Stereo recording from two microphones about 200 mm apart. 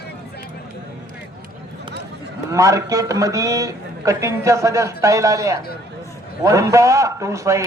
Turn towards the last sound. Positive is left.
turn(degrees=-15)  # may be behind; listen again after turning